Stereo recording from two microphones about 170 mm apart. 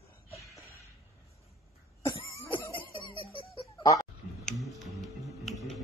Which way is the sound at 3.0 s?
25° left (ahead or behind).